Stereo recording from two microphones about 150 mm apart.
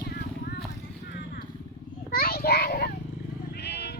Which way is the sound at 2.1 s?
85° left.